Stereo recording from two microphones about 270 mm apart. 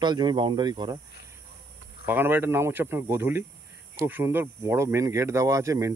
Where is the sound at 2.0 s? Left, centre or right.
Centre.